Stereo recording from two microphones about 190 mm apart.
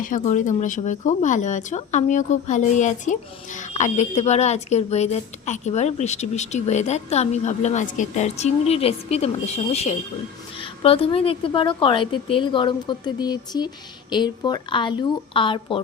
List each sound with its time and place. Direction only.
0.0 s speech: 40° left (ahead or behind)
10.6 s a woman's voice: 30° left (ahead or behind)